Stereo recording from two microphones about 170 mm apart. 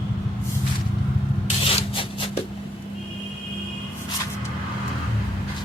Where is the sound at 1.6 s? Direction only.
35° left (ahead or behind).